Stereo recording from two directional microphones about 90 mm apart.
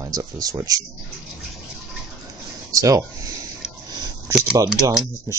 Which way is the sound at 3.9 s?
50° right (ahead or behind).